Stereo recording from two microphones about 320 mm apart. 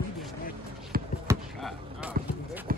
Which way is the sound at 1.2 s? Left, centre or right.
Centre.